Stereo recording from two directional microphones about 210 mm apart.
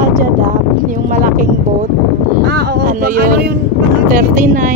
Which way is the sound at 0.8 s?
40° right (ahead or behind).